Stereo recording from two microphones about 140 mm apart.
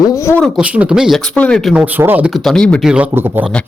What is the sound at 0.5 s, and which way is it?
Speech, 10° right (ahead or behind).